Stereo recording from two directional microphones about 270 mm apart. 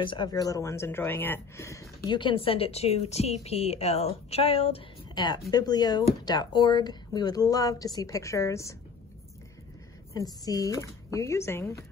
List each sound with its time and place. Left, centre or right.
0.0 s a woman's voice: centre
10.4 s a woman's voice: centre